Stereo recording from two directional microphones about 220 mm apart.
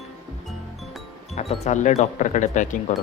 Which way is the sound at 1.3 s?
30° left (ahead or behind).